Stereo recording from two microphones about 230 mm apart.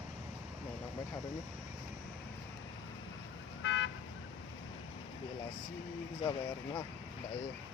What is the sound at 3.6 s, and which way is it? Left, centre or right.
Car alarm, left.